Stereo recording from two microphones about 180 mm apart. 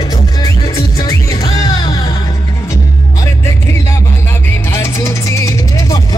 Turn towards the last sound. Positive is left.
turn(degrees=20)  # may be behind; listen again after turning